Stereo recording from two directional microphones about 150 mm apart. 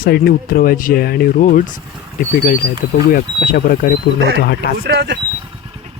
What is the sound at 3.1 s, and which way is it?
Speech, 80° left.